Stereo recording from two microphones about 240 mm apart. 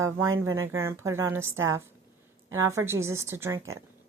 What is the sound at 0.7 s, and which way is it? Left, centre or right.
A woman's voice, centre.